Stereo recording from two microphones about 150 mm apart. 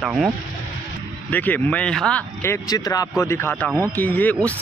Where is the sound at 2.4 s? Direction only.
20° left (ahead or behind).